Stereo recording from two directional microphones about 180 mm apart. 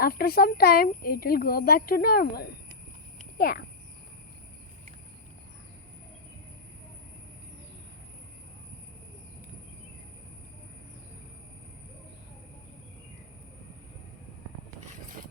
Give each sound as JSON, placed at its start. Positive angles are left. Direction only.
{"t": 0.0, "sound": "speech", "side_deg": 55}